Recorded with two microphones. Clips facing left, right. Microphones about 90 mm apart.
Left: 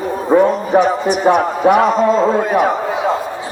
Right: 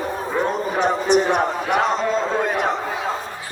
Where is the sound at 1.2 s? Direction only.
50° left (ahead or behind).